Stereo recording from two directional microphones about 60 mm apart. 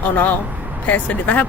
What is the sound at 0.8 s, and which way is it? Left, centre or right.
Speech, left.